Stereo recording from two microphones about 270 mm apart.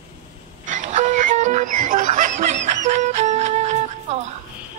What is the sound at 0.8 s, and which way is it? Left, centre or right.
Music, right.